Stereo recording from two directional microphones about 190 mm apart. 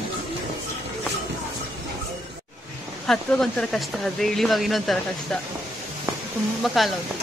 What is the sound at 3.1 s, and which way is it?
Speech, 5° left (ahead or behind).